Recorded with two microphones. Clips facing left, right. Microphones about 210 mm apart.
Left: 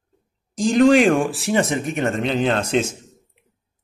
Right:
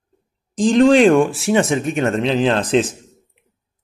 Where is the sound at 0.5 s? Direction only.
30° right (ahead or behind).